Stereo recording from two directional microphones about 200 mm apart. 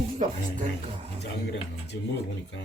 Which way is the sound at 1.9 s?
60° left (ahead or behind).